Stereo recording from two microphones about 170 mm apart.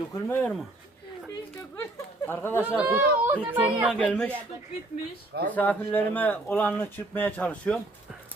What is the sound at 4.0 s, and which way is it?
Speech, 5° left (ahead or behind).